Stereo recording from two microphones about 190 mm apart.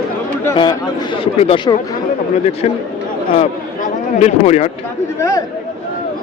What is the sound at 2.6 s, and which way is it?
Speech, 35° left (ahead or behind).